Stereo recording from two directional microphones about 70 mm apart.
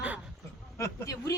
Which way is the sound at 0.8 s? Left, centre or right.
Left.